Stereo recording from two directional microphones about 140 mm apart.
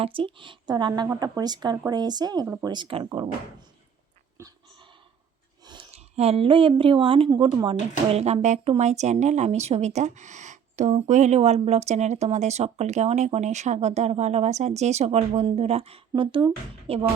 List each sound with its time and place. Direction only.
0.0 s speech: 40° right (ahead or behind)
5.6 s a sound: 35° right (ahead or behind)
5.9 s speech: 45° right (ahead or behind)